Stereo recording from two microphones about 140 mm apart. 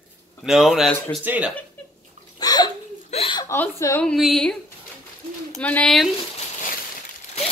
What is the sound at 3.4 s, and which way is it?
Speech, 20° left (ahead or behind).